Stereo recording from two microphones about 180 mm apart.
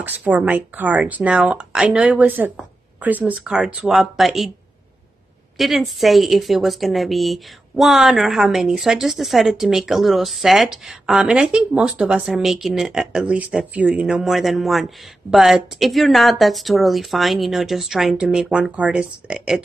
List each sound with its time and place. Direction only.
0.0 s a woman's voice: 10° right (ahead or behind)
5.6 s a woman's voice: centre (ahead or behind)